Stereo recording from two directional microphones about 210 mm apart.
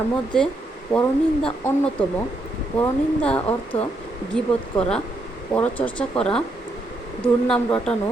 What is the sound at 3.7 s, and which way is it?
Speech, 30° left (ahead or behind).